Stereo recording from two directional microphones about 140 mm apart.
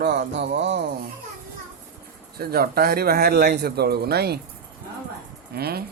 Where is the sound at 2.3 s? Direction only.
90° right.